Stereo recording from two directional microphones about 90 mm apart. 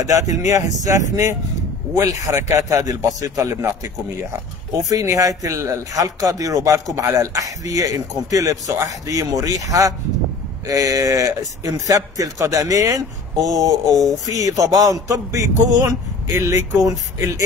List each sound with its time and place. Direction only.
0.0 s speech: 40° right (ahead or behind)
4.8 s speech: 35° right (ahead or behind)